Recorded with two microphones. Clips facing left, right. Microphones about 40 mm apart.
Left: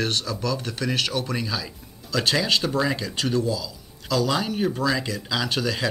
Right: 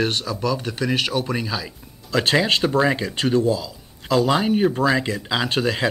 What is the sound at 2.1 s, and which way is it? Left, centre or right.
Speech, right.